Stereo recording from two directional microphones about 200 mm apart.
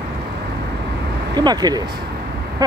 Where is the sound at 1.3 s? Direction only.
20° right (ahead or behind).